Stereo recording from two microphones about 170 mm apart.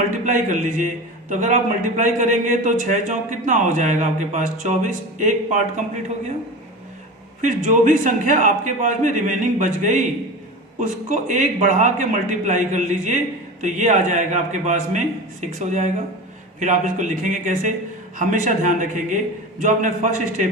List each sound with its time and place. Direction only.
0.3 s a man's voice: 50° right (ahead or behind)
7.4 s a man's voice: 45° right (ahead or behind)